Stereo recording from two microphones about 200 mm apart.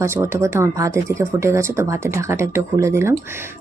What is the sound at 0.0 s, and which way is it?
Speech, 15° right (ahead or behind).